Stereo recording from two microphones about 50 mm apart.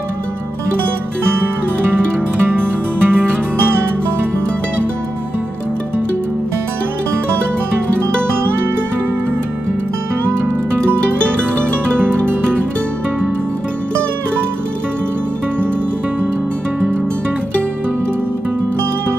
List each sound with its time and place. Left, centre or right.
2.4 s music: right